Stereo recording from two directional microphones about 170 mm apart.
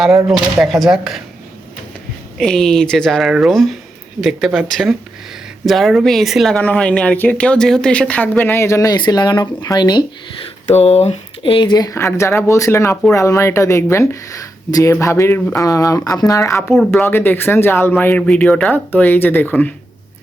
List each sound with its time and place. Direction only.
0.3 s speech: centre (ahead or behind)
2.4 s speech: 5° left (ahead or behind); by 10.1 s 25° left (ahead or behind)
10.7 s speech: 40° left (ahead or behind); by 19.7 s 10° left (ahead or behind)